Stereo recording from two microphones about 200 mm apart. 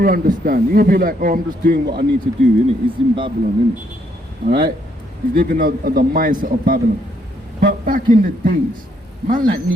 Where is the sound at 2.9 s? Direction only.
25° right (ahead or behind).